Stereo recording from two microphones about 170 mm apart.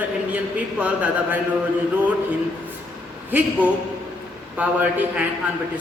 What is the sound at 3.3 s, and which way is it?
A man's voice, 10° right (ahead or behind).